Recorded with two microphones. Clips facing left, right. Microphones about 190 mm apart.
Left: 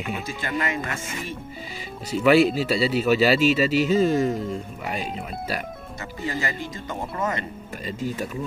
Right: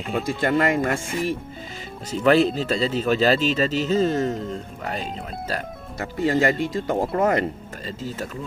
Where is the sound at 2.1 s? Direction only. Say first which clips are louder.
Even; 10° left (ahead or behind).